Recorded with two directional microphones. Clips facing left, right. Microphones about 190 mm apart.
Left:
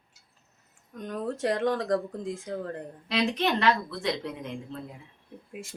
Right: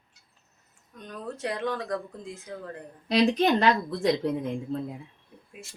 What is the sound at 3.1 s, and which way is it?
A woman's voice, 35° right (ahead or behind).